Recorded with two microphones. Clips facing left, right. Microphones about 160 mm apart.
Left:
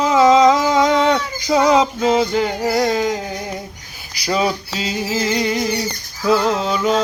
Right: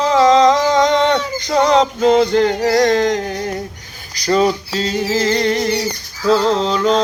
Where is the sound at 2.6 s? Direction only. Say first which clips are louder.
Right 4 dB; 10° left (ahead or behind).